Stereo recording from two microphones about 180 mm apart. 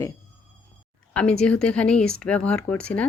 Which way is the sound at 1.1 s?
5° left (ahead or behind).